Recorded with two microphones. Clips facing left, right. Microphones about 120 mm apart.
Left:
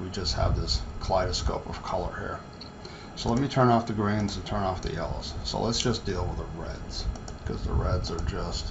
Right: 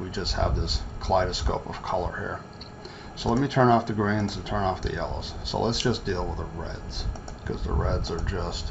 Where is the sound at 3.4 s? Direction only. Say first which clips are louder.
Right 2 dB; 5° left (ahead or behind).